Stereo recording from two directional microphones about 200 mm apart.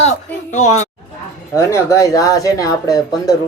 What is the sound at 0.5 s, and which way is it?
Speech, 35° left (ahead or behind).